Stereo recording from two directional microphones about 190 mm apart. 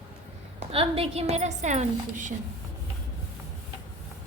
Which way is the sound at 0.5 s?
30° right (ahead or behind).